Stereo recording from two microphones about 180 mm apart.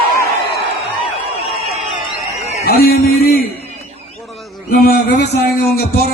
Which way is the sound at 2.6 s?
60° left (ahead or behind).